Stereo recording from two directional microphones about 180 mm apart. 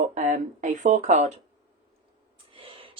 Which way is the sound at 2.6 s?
30° right (ahead or behind).